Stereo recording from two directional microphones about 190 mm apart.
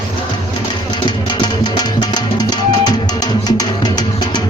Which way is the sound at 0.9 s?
25° left (ahead or behind).